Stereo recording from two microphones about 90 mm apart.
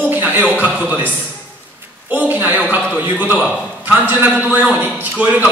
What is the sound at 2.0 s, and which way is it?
A man's voice, 20° right (ahead or behind).